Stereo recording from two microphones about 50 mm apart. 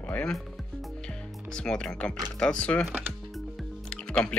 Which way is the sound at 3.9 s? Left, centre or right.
Left.